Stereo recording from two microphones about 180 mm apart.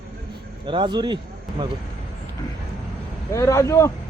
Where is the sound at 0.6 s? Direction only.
25° right (ahead or behind).